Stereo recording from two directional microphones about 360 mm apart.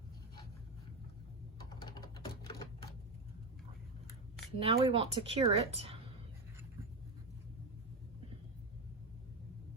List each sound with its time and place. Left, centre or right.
1.7 s typing: centre
4.6 s a woman's voice: centre